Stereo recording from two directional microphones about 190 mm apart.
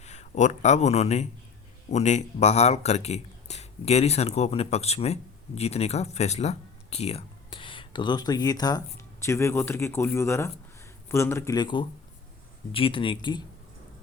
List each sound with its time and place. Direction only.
0.0 s a man's voice: 35° left (ahead or behind)